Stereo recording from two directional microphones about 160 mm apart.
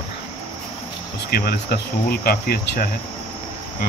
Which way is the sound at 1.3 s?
75° left (ahead or behind).